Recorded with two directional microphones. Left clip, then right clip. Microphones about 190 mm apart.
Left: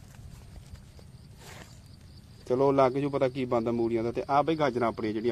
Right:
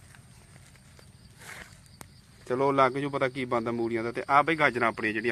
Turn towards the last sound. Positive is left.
turn(degrees=10)  # may be behind; listen again after turning